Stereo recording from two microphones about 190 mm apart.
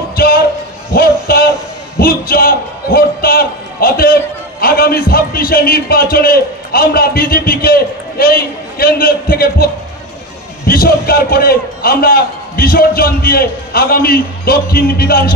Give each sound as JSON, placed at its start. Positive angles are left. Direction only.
{"t": 0.1, "sound": "a sound", "side_deg": 55}
{"t": 2.0, "sound": "a man's voice", "side_deg": 50}
{"t": 10.7, "sound": "a man's voice", "side_deg": 50}